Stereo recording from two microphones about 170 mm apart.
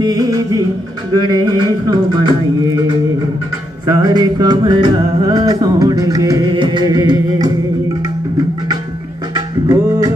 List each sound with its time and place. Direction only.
0.0 s music: 20° right (ahead or behind)
3.8 s music: 20° right (ahead or behind)
9.3 s music: 20° right (ahead or behind)